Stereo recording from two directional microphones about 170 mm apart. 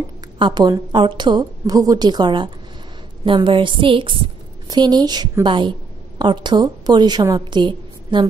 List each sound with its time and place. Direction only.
0.4 s a woman's voice: 25° right (ahead or behind)